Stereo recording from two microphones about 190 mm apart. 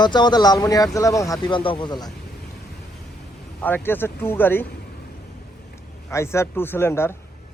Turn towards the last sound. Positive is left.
turn(degrees=15)  # may be behind; listen again after turning